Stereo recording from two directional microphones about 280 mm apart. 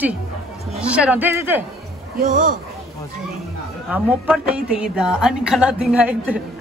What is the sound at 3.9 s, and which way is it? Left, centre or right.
A woman's voice, centre.